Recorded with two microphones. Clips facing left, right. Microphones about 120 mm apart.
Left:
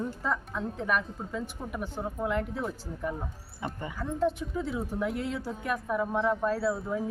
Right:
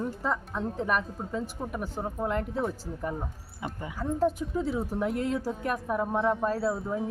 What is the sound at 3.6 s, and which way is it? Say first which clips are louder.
Speech: right 2 dB; 5° right (ahead or behind).